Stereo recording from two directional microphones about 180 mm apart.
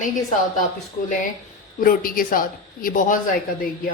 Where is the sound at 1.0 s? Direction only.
45° left (ahead or behind).